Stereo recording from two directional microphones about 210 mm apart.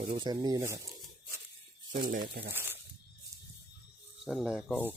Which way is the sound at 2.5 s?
10° right (ahead or behind).